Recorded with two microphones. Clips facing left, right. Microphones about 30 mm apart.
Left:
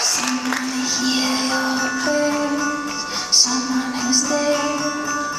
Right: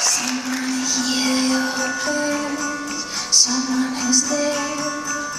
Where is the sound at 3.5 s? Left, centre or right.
Centre.